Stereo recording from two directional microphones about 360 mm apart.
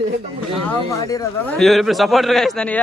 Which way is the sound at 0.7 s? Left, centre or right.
Centre.